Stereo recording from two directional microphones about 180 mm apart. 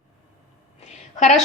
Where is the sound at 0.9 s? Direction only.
40° left (ahead or behind).